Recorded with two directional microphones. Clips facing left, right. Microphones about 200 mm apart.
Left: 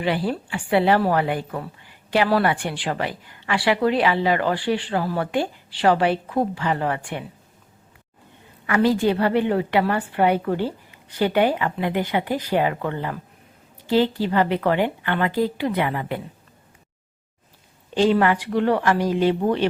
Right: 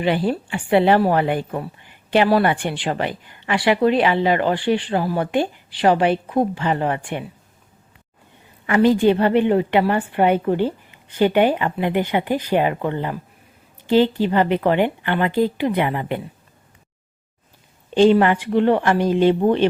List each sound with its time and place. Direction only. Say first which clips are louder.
0.0 s a woman's voice: right 3 dB; 20° right (ahead or behind)
8.6 s a woman's voice: right 4 dB; 20° right (ahead or behind)
17.9 s a woman's voice: right 4 dB; 25° right (ahead or behind)